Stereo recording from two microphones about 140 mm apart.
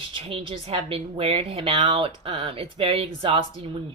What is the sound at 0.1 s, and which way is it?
A woman's voice, 40° right (ahead or behind).